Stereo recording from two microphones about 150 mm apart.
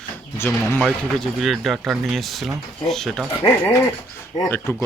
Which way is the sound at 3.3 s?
15° left (ahead or behind).